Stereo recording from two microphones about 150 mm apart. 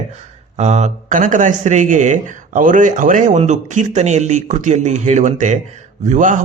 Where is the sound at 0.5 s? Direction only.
50° right (ahead or behind).